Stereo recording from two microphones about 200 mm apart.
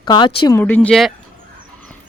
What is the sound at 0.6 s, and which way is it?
Speech, 10° left (ahead or behind).